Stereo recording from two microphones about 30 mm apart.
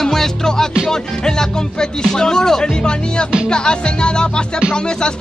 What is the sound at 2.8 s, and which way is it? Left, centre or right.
Speech, left.